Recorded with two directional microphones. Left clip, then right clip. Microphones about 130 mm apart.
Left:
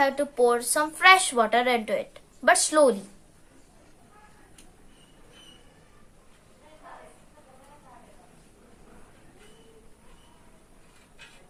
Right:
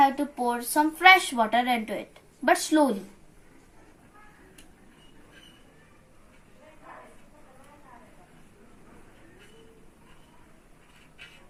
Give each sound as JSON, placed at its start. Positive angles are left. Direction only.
{"t": 0.0, "sound": "a woman's voice", "side_deg": 90}